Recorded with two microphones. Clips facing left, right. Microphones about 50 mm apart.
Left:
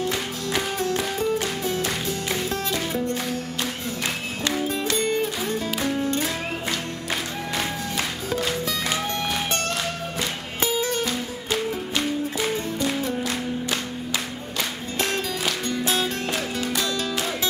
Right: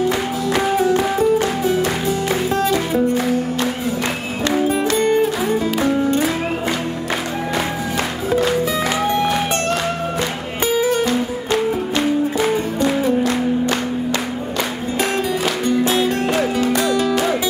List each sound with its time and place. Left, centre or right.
0.6 s music: centre
4.5 s music: right
8.3 s music: centre
10.6 s music: centre
15.0 s music: centre